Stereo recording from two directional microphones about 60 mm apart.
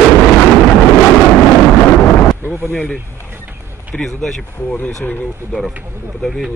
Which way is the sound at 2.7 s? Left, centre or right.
Centre.